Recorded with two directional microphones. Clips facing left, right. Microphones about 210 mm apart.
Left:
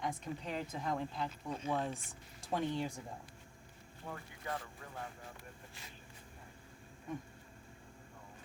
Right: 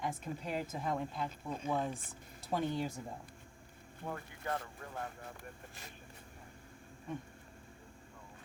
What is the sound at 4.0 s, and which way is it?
Speech, 55° right (ahead or behind).